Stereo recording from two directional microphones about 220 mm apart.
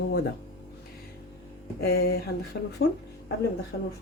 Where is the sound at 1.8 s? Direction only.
45° left (ahead or behind).